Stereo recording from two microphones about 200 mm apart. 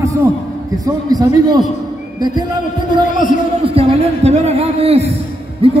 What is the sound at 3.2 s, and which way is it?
A man's voice, 30° right (ahead or behind).